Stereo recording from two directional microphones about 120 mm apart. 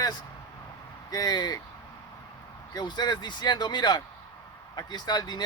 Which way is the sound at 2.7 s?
35° left (ahead or behind).